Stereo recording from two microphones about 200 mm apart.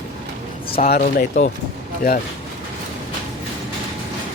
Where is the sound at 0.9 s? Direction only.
45° left (ahead or behind).